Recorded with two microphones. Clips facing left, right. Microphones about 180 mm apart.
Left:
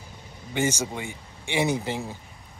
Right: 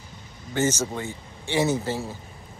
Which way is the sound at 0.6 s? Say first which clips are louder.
Right 2 dB; 15° left (ahead or behind).